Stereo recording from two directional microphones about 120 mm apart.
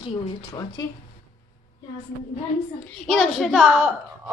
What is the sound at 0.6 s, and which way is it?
Speech, 30° left (ahead or behind).